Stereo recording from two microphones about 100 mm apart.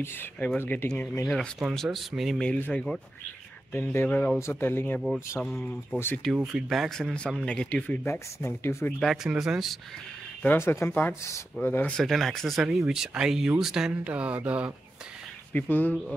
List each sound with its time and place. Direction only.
0.6 s speech: 20° left (ahead or behind)
0.8 s speech: 10° left (ahead or behind)
2.4 s speech: 10° left (ahead or behind)
3.7 s speech: 20° left (ahead or behind)
4.4 s speech: 25° left (ahead or behind)
5.4 s speech: 5° left (ahead or behind)
5.9 s speech: 20° left (ahead or behind)
6.4 s speech: centre (ahead or behind)
7.4 s speech: 10° left (ahead or behind)
9.0 s speech: 5° right (ahead or behind)
10.4 s speech: 20° left (ahead or behind)
11.9 s speech: centre (ahead or behind); by 14.7 s 15° right (ahead or behind)
15.5 s speech: 15° left (ahead or behind)